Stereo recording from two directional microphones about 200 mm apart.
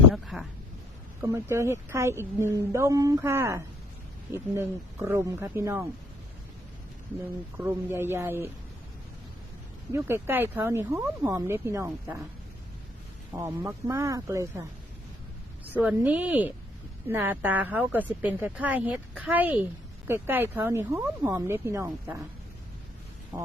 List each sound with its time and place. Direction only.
0.1 s a sound: centre (ahead or behind)
1.2 s speech: 15° right (ahead or behind)
7.5 s speech: 10° right (ahead or behind)
9.9 s speech: 10° right (ahead or behind)
13.3 s speech: 10° right (ahead or behind)
15.7 s speech: 5° right (ahead or behind)
23.3 s speech: 20° right (ahead or behind)